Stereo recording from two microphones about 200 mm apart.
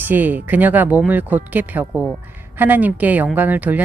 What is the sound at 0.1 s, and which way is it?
Speech, 10° right (ahead or behind).